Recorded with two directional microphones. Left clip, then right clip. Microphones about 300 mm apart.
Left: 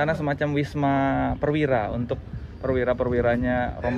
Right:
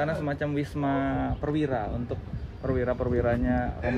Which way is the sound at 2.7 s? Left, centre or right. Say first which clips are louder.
Left 5 dB; left.